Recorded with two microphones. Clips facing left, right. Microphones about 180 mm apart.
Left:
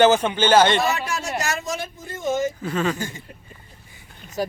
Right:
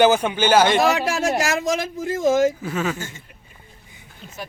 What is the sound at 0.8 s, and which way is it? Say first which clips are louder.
Speech: right 5 dB; 90° right.